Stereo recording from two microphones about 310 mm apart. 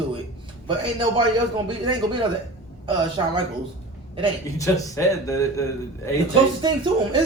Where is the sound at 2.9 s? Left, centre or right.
Centre.